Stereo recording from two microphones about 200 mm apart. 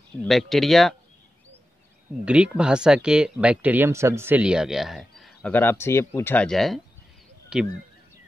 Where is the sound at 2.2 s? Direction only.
5° right (ahead or behind).